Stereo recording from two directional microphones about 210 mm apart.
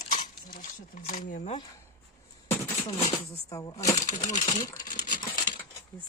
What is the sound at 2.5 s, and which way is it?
Beatboxing, 15° left (ahead or behind).